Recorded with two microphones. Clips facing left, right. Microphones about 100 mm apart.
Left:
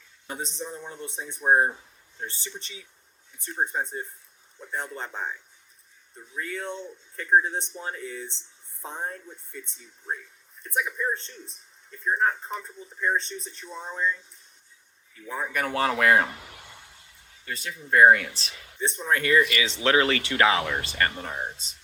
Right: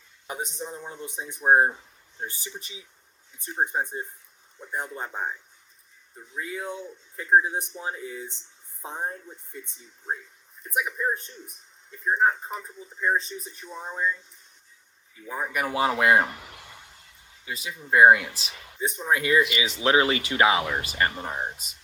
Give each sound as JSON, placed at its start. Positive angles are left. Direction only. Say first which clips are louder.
{"t": 0.3, "sound": "speech", "louder": "right 1 dB", "side_deg": -20}
{"t": 10.6, "sound": "speech", "louder": "right 1 dB", "side_deg": -10}
{"t": 15.3, "sound": "speech", "louder": "even", "side_deg": -10}
{"t": 15.9, "sound": "a sound", "louder": "even", "side_deg": -15}
{"t": 17.4, "sound": "speech", "louder": "even", "side_deg": -5}
{"t": 19.8, "sound": "speech", "louder": "right 1 dB", "side_deg": -20}